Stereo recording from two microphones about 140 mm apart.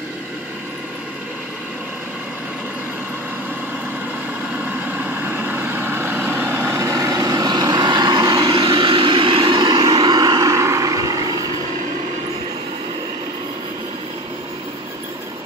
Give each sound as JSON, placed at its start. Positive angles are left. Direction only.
{"t": 4.7, "sound": "vehicle", "side_deg": -15}